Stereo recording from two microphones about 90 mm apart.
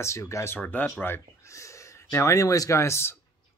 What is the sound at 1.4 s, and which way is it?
Speech, 35° left (ahead or behind).